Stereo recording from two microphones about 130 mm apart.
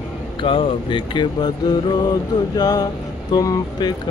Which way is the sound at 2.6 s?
30° left (ahead or behind).